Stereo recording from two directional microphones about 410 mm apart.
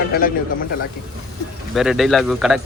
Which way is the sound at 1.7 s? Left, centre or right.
Centre.